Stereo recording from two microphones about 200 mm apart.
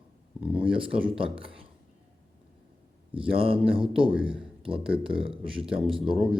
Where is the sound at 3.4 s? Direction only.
25° right (ahead or behind).